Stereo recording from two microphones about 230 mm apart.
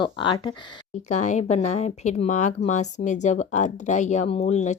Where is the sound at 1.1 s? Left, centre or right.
Left.